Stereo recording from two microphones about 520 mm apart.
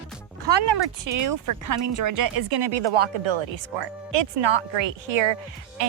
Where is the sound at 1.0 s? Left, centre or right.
Right.